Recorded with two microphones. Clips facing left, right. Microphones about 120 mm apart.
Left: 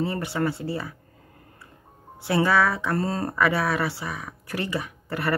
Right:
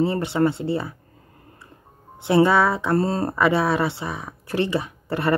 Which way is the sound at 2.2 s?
25° right (ahead or behind).